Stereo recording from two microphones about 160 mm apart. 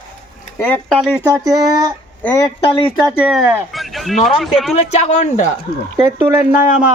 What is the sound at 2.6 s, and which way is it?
Speech, 35° left (ahead or behind).